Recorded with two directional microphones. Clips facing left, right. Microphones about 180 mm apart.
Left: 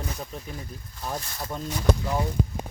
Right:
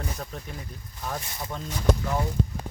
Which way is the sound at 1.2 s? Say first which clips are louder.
Even; 15° right (ahead or behind).